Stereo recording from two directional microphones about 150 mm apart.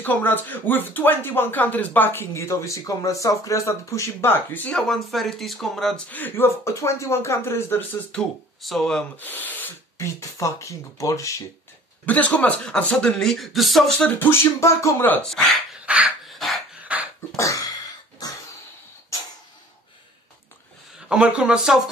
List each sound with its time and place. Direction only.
0.0 s speech: 10° left (ahead or behind)
12.1 s speech: 10° left (ahead or behind)
15.2 s dog: centre (ahead or behind)
17.4 s a sound: 20° left (ahead or behind)
21.1 s a man's voice: 5° right (ahead or behind)